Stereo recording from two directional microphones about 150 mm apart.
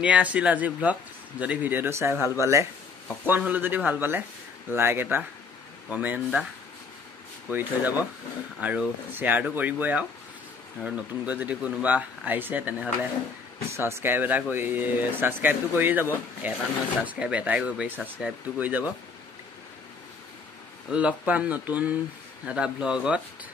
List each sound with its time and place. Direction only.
0.0 s speech: 10° right (ahead or behind)
7.4 s speech: 10° right (ahead or behind)
20.9 s speech: 10° right (ahead or behind)